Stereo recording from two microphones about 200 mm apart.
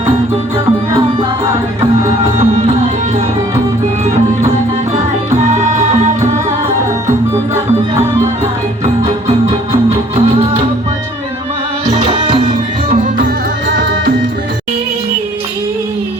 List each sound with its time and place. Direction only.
2.1 s music: 30° right (ahead or behind)
5.4 s music: 35° right (ahead or behind)
8.8 s music: 35° right (ahead or behind)
12.5 s music: 45° right (ahead or behind)